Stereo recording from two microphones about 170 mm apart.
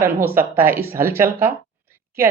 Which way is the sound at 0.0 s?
15° right (ahead or behind).